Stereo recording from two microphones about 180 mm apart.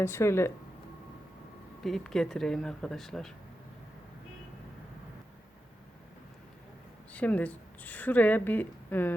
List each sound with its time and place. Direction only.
0.0 s speech: 15° left (ahead or behind)
1.8 s speech: centre (ahead or behind)
7.1 s a woman's voice: 10° left (ahead or behind)